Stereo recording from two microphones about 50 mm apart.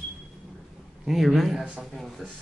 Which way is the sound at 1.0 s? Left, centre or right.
Centre.